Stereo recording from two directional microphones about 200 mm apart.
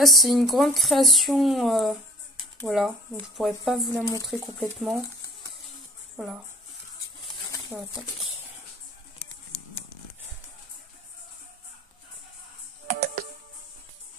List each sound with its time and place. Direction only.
0.0 s speech: centre (ahead or behind)
6.1 s speech: centre (ahead or behind)
7.7 s speech: 5° right (ahead or behind)
12.8 s music: 45° right (ahead or behind)